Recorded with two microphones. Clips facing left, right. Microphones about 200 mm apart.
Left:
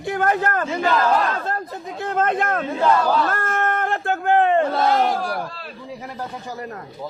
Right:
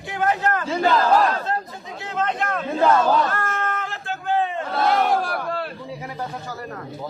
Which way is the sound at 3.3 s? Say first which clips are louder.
Left 3 dB; 50° left (ahead or behind).